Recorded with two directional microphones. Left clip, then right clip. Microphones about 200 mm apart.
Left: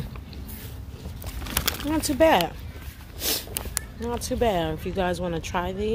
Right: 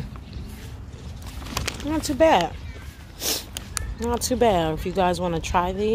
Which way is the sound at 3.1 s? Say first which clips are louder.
Right 1 dB; centre (ahead or behind).